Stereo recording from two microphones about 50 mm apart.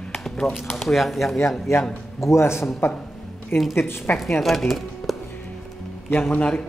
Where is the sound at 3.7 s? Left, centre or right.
Left.